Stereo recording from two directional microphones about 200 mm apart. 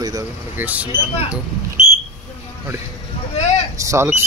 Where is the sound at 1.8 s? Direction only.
30° left (ahead or behind).